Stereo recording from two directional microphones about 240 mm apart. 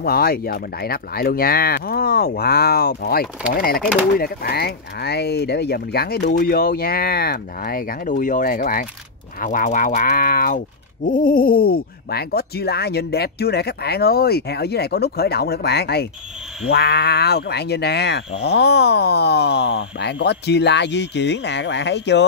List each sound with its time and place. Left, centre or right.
0.0 s speech: left